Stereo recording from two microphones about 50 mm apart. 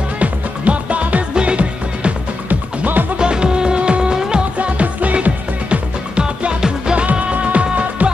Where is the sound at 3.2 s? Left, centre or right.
Centre.